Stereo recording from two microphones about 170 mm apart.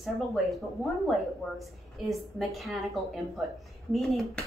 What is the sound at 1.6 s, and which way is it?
A woman's voice, centre (ahead or behind).